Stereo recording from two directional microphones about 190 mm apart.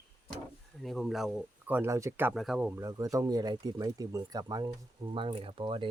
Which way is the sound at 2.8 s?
15° right (ahead or behind).